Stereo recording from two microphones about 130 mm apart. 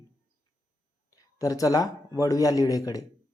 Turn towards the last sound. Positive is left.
turn(degrees=25)  # may be behind; listen again after turning